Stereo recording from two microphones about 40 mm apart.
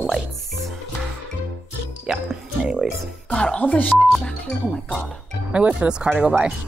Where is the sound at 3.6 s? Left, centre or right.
Left.